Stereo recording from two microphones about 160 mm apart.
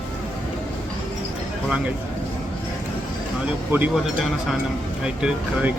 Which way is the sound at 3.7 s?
15° right (ahead or behind).